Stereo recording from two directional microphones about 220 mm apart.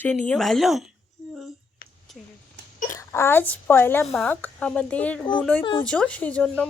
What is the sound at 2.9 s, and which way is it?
Speech, 10° left (ahead or behind).